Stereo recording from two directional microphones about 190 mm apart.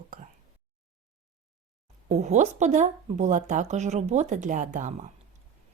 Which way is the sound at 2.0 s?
35° right (ahead or behind).